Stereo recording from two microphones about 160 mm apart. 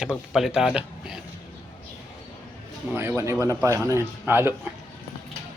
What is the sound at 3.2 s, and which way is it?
Speech, 20° right (ahead or behind).